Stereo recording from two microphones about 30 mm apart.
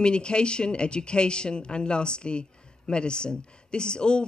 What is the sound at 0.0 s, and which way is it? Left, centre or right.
A woman's voice, left.